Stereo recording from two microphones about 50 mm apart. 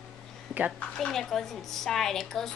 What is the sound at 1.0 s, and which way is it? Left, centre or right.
Speech, centre.